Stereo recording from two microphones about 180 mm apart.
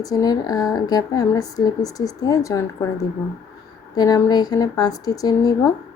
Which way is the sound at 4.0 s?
20° left (ahead or behind).